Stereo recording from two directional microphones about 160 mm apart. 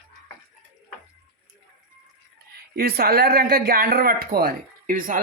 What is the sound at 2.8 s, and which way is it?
Speech, 70° right (ahead or behind).